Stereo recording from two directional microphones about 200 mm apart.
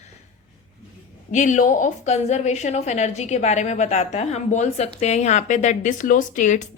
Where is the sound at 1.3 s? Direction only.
35° left (ahead or behind).